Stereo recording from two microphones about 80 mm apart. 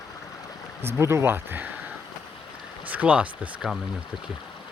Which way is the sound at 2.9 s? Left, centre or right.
Centre.